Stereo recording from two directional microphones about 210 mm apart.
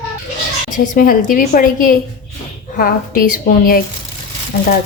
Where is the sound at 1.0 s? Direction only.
40° left (ahead or behind).